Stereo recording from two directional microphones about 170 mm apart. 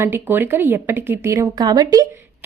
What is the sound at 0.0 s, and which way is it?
A woman's voice, 10° right (ahead or behind).